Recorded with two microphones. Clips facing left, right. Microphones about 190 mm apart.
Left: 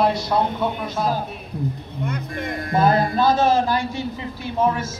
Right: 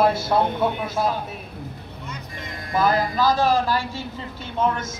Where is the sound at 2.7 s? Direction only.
25° left (ahead or behind).